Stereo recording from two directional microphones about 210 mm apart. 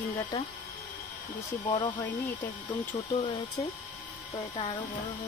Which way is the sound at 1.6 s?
20° left (ahead or behind).